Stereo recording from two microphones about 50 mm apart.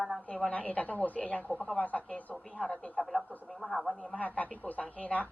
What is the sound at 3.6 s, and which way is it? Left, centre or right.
Speech, centre.